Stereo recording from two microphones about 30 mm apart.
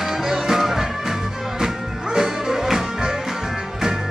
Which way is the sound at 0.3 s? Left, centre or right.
Centre.